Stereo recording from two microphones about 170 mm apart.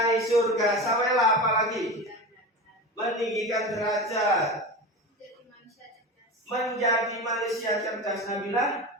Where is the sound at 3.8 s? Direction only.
20° left (ahead or behind).